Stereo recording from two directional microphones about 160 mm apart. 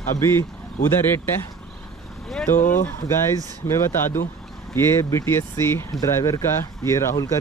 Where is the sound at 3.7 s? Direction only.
15° left (ahead or behind).